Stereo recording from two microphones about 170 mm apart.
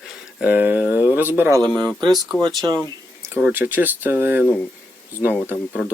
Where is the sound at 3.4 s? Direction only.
5° right (ahead or behind).